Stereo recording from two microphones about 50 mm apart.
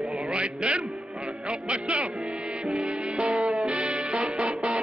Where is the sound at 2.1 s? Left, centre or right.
Centre.